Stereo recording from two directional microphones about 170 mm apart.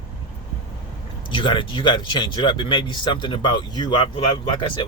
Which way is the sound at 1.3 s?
30° left (ahead or behind).